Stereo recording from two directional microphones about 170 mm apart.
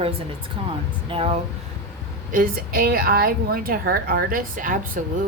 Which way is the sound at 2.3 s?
60° right (ahead or behind).